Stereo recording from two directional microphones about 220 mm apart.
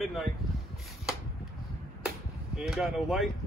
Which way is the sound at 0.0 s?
Centre (ahead or behind).